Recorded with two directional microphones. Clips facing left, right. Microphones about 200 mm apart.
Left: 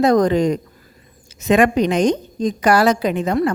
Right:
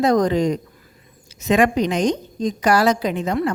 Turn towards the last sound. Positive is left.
turn(degrees=55)  # may be behind; listen again after turning